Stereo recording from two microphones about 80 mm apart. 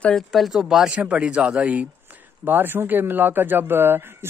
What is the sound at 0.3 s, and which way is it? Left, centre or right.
Speech, centre.